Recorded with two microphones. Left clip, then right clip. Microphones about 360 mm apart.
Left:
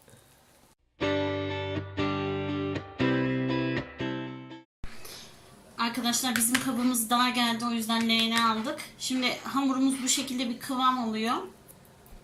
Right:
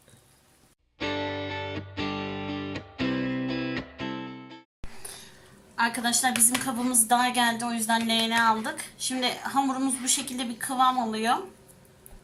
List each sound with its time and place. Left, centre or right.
0.9 s music: centre
5.7 s a woman's voice: right